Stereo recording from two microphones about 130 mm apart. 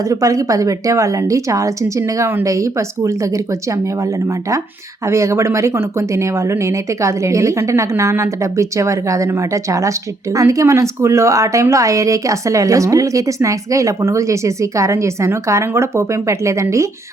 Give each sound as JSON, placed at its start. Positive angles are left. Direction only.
{"t": 0.0, "sound": "a woman's voice", "side_deg": -25}